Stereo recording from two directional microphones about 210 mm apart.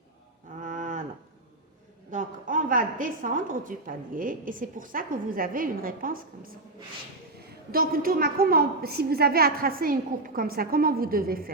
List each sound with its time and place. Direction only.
0.6 s cattle: 40° right (ahead or behind)
2.0 s a woman's voice: 40° right (ahead or behind)
7.7 s a woman's voice: 45° right (ahead or behind)